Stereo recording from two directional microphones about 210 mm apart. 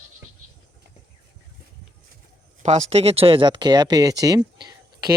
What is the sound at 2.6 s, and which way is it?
Speech, 30° right (ahead or behind).